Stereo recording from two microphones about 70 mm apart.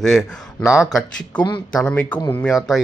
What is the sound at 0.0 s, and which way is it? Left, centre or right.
Speech, centre.